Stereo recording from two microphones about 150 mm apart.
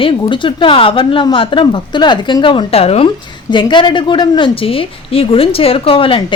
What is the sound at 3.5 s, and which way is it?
A woman's voice, 30° left (ahead or behind).